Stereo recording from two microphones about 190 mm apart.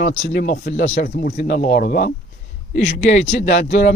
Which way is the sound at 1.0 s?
50° left (ahead or behind).